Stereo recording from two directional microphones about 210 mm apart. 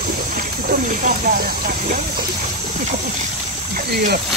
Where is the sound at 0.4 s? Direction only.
40° right (ahead or behind).